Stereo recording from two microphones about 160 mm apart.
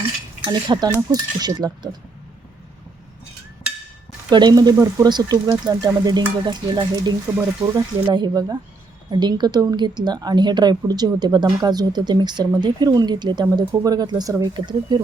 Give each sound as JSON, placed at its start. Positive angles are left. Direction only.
{"t": 0.4, "sound": "a woman's voice", "side_deg": -30}
{"t": 4.3, "sound": "a woman's voice", "side_deg": -30}